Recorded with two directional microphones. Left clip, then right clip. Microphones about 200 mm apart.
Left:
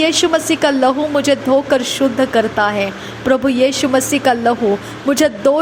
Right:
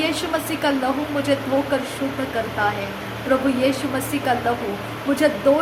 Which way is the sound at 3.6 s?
40° left (ahead or behind).